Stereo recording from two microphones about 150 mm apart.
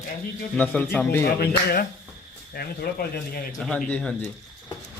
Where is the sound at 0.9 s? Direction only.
15° left (ahead or behind).